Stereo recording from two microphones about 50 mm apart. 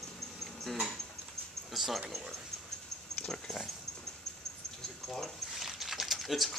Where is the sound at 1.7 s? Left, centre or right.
Centre.